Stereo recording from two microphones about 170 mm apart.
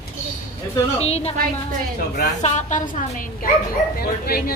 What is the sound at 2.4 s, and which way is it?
Speech, 45° left (ahead or behind).